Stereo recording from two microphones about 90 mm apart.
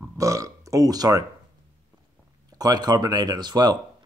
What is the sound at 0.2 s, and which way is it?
Speech, 35° right (ahead or behind).